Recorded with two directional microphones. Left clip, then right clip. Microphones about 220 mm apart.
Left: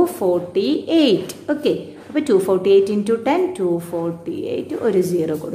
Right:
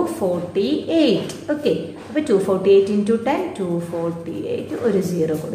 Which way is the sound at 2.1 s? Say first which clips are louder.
Left 2 dB; 50° left (ahead or behind).